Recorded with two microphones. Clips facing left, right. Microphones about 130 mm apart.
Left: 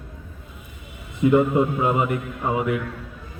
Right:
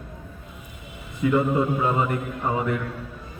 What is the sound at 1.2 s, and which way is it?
A man's voice, 20° left (ahead or behind).